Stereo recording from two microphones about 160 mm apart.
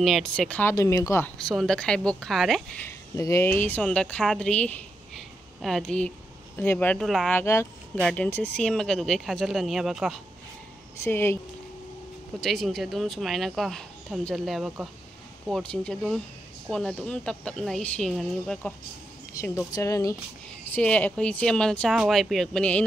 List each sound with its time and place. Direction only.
0.0 s speech: centre (ahead or behind)
0.7 s speech: 20° left (ahead or behind)
1.4 s speech: centre (ahead or behind)
3.2 s speech: 20° left (ahead or behind); by 7.3 s centre (ahead or behind)
7.3 s speech: 15° left (ahead or behind); by 10.2 s centre (ahead or behind)
11.1 s speech: 15° left (ahead or behind)
12.4 s speech: centre (ahead or behind)
19.4 s speech: 20° left (ahead or behind)
20.7 s speech: 10° left (ahead or behind)